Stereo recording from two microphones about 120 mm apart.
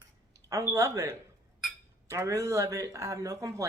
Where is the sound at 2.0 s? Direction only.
25° right (ahead or behind).